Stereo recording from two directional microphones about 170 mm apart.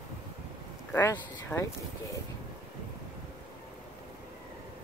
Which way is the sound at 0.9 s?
15° left (ahead or behind).